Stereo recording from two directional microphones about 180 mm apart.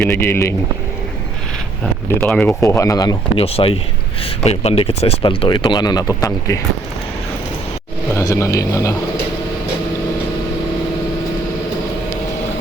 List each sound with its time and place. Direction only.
0.1 s speech: 15° left (ahead or behind)
2.0 s speech: 10° left (ahead or behind)
3.4 s speech: 30° left (ahead or behind)
8.1 s speech: 15° left (ahead or behind)